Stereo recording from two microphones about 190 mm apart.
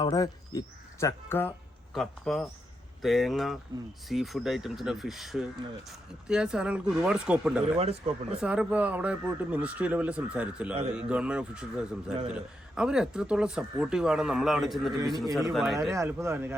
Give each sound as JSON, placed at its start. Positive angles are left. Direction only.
{"t": 0.0, "sound": "speech", "side_deg": 20}
{"t": 7.8, "sound": "speech", "side_deg": -35}
{"t": 8.3, "sound": "speech", "side_deg": -5}
{"t": 15.9, "sound": "speech", "side_deg": -15}